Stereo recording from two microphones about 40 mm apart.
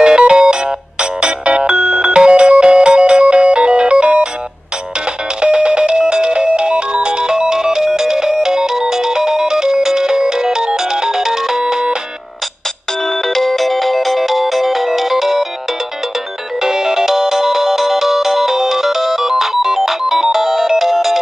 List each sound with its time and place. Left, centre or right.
0.0 s music: centre
1.2 s ringtone: right
2.1 s music: right
5.4 s music: right
13.3 s music: centre
16.6 s music: centre